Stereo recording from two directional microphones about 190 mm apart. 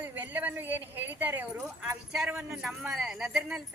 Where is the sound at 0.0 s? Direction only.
10° right (ahead or behind).